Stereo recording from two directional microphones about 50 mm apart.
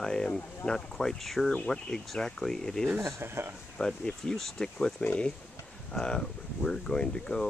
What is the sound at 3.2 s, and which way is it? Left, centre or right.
Speech, right.